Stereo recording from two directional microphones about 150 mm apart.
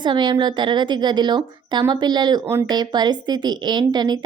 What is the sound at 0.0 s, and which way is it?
A woman's voice, 30° right (ahead or behind).